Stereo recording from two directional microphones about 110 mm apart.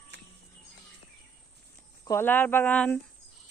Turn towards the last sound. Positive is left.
turn(degrees=10)  # may be behind; listen again after turning